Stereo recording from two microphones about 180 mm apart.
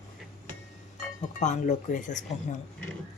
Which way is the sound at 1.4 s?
40° left (ahead or behind).